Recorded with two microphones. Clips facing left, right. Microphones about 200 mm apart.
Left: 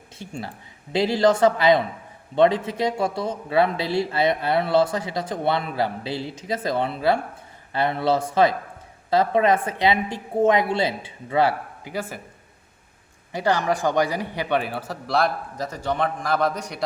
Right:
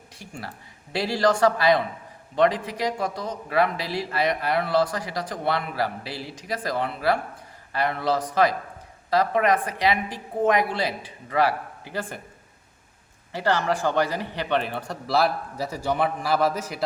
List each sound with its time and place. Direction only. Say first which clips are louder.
0.2 s speech: left 4 dB; 25° left (ahead or behind)
11.9 s speech: left 2 dB; 10° left (ahead or behind)
13.3 s a man's voice: left 2 dB; 15° left (ahead or behind); by 16.8 s 5° right (ahead or behind)